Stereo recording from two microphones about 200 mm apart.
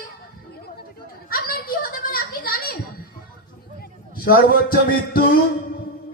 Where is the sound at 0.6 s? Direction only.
50° left (ahead or behind).